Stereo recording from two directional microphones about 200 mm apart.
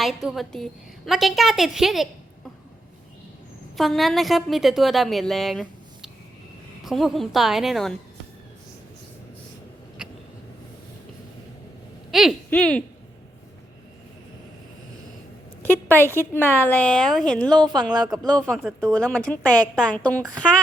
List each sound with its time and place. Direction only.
0.0 s a woman's voice: centre (ahead or behind)
3.8 s a woman's voice: centre (ahead or behind)
12.1 s a woman's voice: centre (ahead or behind)
15.6 s a woman's voice: 10° left (ahead or behind)
17.5 s a woman's voice: 20° right (ahead or behind)
18.2 s a woman's voice: centre (ahead or behind)